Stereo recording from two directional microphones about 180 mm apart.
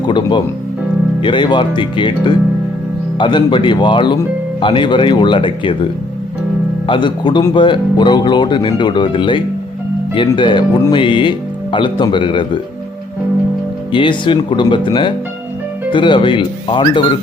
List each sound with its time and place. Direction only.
0.0 s music: 25° left (ahead or behind)
1.2 s speech: 25° left (ahead or behind)
13.9 s speech: 25° left (ahead or behind)